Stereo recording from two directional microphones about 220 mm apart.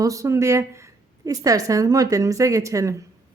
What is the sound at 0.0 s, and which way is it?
Speech, 15° right (ahead or behind).